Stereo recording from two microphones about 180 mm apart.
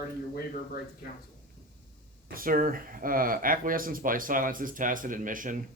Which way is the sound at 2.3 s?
50° right (ahead or behind).